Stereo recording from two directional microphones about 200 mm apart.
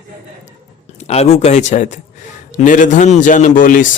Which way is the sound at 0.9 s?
30° left (ahead or behind).